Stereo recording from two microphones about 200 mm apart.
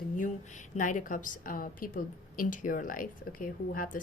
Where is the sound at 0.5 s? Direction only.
40° left (ahead or behind).